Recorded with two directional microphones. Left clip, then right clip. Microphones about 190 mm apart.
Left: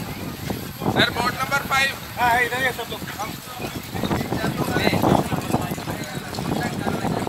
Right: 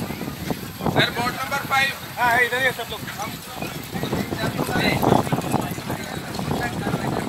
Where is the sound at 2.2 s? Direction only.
60° left (ahead or behind).